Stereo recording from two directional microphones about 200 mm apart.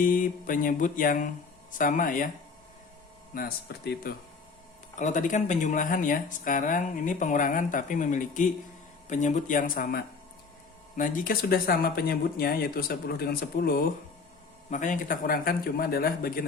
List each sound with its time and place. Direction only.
0.0 s speech: 45° left (ahead or behind)
3.3 s speech: 50° left (ahead or behind)
4.9 s speech: 40° left (ahead or behind)